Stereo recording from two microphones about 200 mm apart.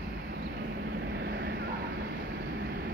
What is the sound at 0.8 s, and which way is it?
Vehicle, 55° right (ahead or behind).